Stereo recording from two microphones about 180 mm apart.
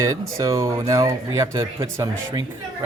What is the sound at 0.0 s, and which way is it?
Speech, 20° right (ahead or behind).